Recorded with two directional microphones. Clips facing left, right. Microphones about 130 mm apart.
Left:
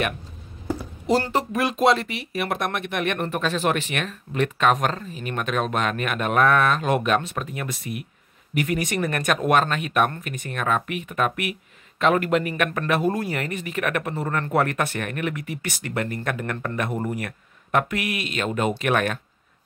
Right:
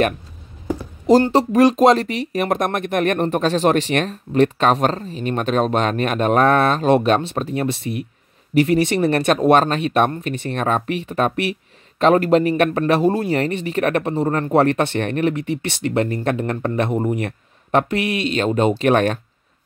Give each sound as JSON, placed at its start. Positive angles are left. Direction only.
{"t": 1.3, "sound": "speech", "side_deg": -35}